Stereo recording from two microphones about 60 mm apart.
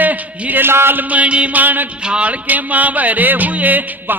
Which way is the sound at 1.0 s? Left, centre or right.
Right.